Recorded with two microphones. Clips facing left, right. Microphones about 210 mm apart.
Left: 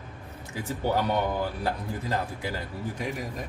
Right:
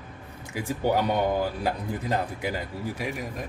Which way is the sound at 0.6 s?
15° right (ahead or behind).